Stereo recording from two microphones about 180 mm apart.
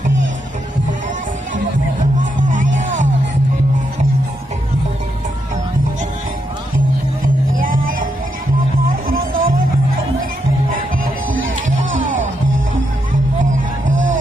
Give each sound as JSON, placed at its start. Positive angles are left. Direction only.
{"t": 2.0, "sound": "music", "side_deg": -45}
{"t": 7.5, "sound": "music", "side_deg": -50}
{"t": 9.1, "sound": "music", "side_deg": -50}
{"t": 13.8, "sound": "music", "side_deg": -90}